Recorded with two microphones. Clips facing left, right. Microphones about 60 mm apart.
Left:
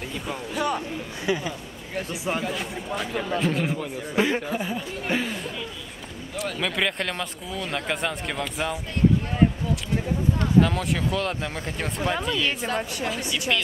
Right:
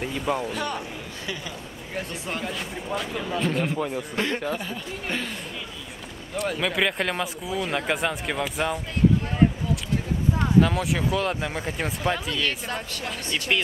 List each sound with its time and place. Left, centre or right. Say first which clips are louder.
0.0 s speech: right 6 dB; centre
0.5 s speech: left 3 dB; centre
1.2 s speech: left 9 dB; centre
2.0 s speech: left 3 dB; centre
3.7 s speech: right 3 dB; centre
4.1 s speech: left 3 dB; centre
6.3 s speech: right 2 dB; centre
10.3 s speech: right 1 dB; centre